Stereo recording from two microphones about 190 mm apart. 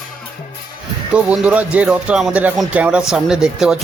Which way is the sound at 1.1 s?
5° right (ahead or behind).